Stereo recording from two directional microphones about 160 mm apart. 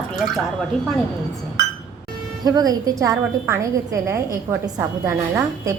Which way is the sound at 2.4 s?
25° right (ahead or behind).